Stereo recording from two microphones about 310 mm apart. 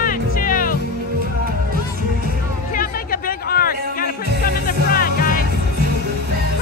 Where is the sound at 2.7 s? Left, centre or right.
Left.